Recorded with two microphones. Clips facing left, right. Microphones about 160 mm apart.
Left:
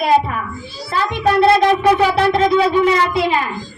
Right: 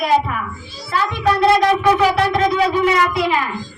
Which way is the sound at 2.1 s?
30° left (ahead or behind).